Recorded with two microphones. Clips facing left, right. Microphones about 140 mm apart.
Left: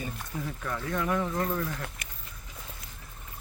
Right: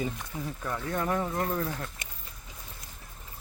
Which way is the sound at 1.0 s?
35° right (ahead or behind).